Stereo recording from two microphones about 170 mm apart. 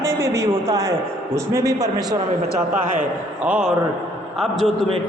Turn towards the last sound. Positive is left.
turn(degrees=0)  # may be behind; listen again after turning